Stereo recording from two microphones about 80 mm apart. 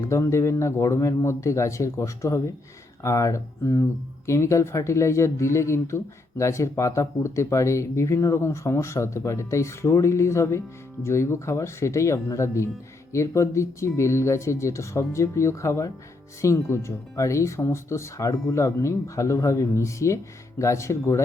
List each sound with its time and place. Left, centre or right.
0.1 s speech: left